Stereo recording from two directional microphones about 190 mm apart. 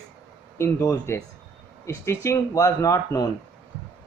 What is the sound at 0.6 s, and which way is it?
Speech, 15° left (ahead or behind).